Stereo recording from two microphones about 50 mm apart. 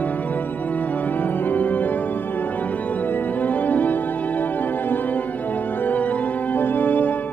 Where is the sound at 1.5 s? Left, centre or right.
Left.